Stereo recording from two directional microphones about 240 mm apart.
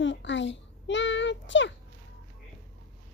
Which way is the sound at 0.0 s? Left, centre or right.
Left.